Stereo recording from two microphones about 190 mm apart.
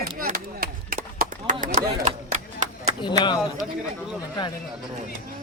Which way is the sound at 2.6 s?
40° right (ahead or behind).